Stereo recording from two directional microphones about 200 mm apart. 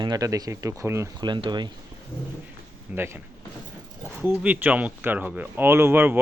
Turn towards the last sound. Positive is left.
turn(degrees=-10)  # may be behind; listen again after turning